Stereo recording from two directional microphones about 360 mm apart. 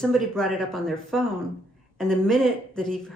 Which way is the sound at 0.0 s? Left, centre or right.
Centre.